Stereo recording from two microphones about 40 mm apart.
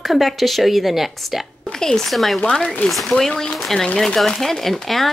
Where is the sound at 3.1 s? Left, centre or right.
Centre.